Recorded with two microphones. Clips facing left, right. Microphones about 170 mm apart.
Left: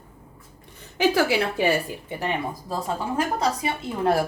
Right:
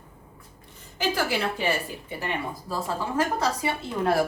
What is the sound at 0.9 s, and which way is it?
Speech, 75° left (ahead or behind).